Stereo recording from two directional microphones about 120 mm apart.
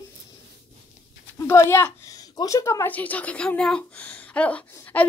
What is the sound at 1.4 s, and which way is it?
A woman's voice, 20° left (ahead or behind).